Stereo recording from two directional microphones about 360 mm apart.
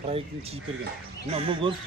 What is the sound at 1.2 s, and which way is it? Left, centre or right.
Speech, centre.